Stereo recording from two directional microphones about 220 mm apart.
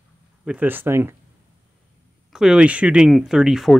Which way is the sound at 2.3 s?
Centre (ahead or behind).